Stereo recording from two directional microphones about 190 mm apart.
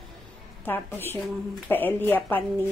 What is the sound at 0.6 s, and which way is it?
Speech, 10° left (ahead or behind).